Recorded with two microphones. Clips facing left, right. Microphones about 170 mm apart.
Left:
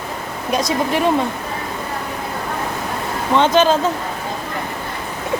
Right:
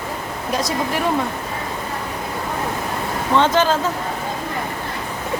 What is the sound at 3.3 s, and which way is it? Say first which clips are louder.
Speech: left 3 dB; 20° left (ahead or behind).